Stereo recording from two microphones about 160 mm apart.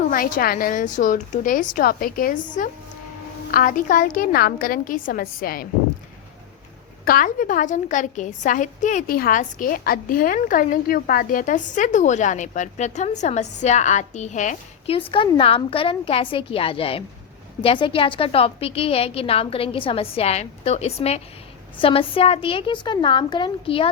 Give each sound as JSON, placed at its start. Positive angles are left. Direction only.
{"t": 0.1, "sound": "a woman's voice", "side_deg": 60}
{"t": 7.0, "sound": "a woman's voice", "side_deg": 65}
{"t": 15.1, "sound": "a woman's voice", "side_deg": 35}